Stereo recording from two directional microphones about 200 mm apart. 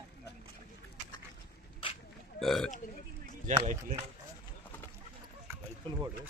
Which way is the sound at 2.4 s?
Centre (ahead or behind).